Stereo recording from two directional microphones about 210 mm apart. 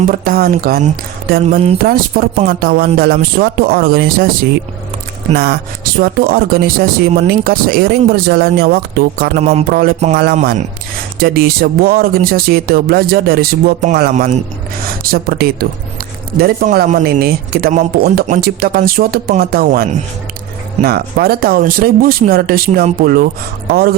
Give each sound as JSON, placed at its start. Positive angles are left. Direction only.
{"t": 0.1, "sound": "speech", "side_deg": -45}
{"t": 5.3, "sound": "speech", "side_deg": -45}
{"t": 9.4, "sound": "speech", "side_deg": -30}
{"t": 9.6, "sound": "speech", "side_deg": -45}